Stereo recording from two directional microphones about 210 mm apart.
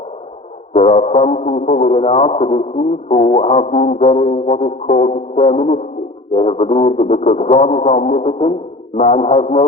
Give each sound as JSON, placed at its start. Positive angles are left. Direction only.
{"t": 0.8, "sound": "music", "side_deg": 30}